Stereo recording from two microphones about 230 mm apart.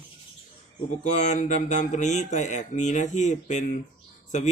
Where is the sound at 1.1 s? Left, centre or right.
Left.